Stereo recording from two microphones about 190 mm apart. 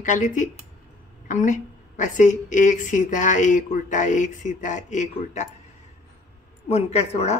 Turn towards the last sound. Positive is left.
turn(degrees=35)  # may be behind; listen again after turning